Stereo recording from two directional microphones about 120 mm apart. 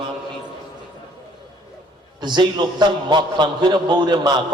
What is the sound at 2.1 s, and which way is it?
A man's voice, 40° right (ahead or behind).